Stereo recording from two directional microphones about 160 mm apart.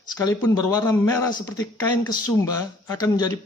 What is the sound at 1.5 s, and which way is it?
Speech, 25° left (ahead or behind).